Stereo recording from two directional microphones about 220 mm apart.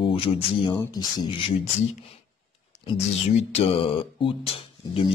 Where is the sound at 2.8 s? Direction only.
30° left (ahead or behind).